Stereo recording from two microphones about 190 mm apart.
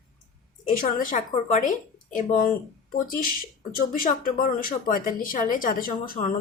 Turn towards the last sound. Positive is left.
turn(degrees=45)  # may be behind; listen again after turning